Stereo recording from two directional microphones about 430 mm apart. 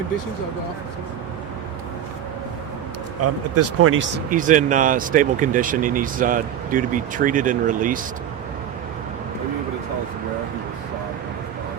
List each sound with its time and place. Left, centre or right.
3.5 s speech: right
4.3 s speech: centre